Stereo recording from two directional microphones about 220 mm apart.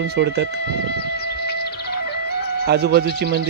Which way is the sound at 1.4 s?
45° left (ahead or behind).